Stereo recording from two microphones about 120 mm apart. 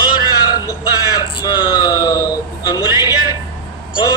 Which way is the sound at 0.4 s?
30° left (ahead or behind).